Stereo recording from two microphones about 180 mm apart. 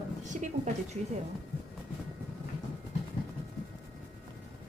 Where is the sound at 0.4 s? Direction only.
40° right (ahead or behind).